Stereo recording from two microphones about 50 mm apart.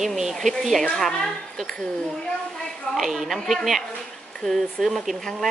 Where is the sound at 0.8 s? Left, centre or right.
Centre.